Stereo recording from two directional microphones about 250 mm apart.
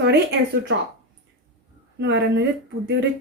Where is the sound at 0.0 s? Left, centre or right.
Right.